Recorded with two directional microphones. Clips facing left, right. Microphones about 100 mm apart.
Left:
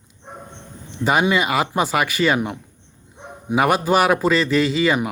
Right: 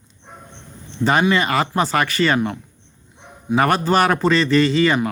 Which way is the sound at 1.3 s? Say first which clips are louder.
Right 1 dB; 10° left (ahead or behind).